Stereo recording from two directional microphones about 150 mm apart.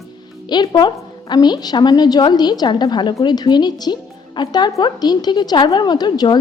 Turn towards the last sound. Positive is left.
turn(degrees=30)  # may be behind; listen again after turning